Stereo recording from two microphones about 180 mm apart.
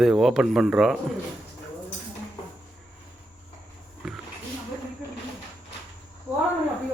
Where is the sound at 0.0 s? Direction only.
Centre (ahead or behind).